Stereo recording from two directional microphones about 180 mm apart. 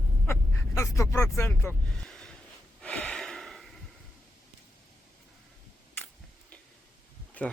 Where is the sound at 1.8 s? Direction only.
5° left (ahead or behind).